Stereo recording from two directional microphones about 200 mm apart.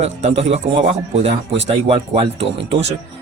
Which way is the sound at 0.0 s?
35° right (ahead or behind).